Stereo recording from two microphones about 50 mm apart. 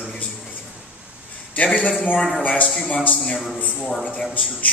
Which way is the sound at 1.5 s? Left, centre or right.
Left.